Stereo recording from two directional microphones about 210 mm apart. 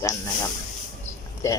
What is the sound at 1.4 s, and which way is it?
Speech, 15° left (ahead or behind).